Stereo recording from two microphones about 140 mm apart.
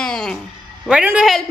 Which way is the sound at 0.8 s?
10° right (ahead or behind).